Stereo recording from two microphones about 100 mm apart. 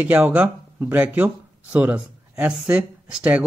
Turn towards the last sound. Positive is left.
turn(degrees=-15)  # may be behind; listen again after turning